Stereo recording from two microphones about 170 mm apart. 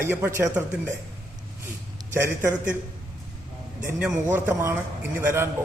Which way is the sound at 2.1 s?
15° right (ahead or behind).